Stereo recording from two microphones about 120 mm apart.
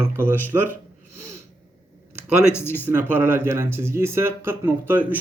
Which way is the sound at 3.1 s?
15° right (ahead or behind).